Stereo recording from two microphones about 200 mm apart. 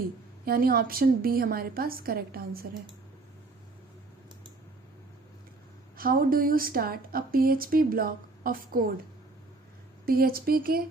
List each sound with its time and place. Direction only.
0.4 s a woman's voice: 50° right (ahead or behind)
6.0 s a woman's voice: 45° right (ahead or behind)
10.1 s a woman's voice: 50° right (ahead or behind)